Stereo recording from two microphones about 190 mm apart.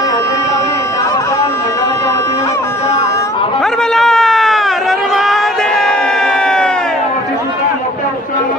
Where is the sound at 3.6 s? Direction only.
Centre (ahead or behind).